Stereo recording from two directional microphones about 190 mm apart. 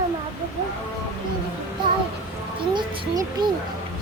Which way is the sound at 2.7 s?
25° right (ahead or behind).